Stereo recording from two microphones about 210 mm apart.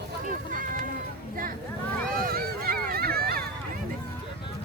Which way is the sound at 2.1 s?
45° right (ahead or behind).